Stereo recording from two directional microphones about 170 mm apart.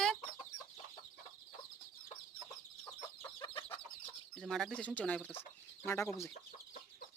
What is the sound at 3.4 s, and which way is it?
Chicken, 30° left (ahead or behind).